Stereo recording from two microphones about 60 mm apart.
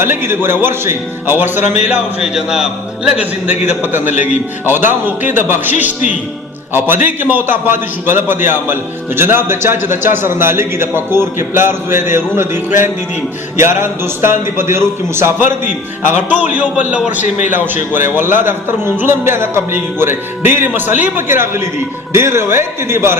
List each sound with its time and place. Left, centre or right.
0.0 s a man's voice: right
2.2 s a man's voice: centre
3.9 s a man's voice: right
16.3 s a man's voice: right
18.1 s a man's voice: right